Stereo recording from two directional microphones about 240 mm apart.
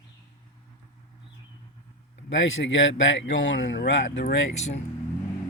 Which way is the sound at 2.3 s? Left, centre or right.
Left.